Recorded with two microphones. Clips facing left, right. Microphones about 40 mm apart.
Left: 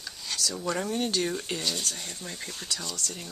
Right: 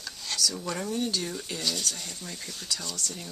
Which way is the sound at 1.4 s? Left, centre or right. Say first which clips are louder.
Even; left.